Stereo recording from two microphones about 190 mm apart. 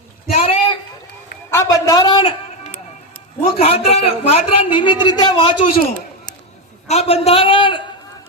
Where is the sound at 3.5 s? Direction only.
30° left (ahead or behind).